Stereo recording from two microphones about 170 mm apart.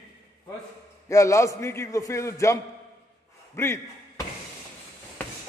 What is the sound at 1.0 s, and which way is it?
A man's voice, 15° left (ahead or behind).